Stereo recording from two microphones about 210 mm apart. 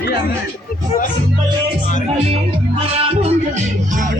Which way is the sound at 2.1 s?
30° right (ahead or behind).